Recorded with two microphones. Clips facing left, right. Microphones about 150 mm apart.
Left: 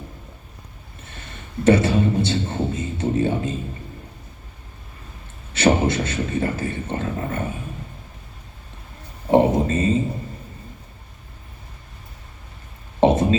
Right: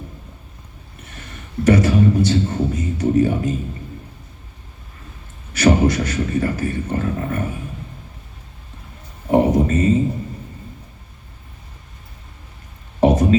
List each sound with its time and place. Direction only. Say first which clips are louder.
1.6 s a man's voice: right 2 dB; 25° left (ahead or behind)
5.5 s a man's voice: right 3 dB; 25° left (ahead or behind)
9.3 s speech: right 1 dB; 25° left (ahead or behind)
13.0 s a sound: right 1 dB; 25° left (ahead or behind)